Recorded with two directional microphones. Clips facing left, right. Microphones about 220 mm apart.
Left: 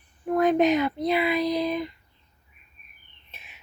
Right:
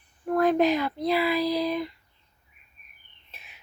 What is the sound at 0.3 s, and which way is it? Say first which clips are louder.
A woman's voice: left 1 dB; centre (ahead or behind).